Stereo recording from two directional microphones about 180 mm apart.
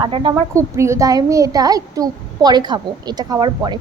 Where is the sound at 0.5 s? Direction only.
15° right (ahead or behind).